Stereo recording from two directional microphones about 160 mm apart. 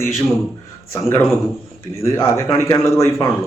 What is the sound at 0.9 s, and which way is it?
Speech, 15° left (ahead or behind).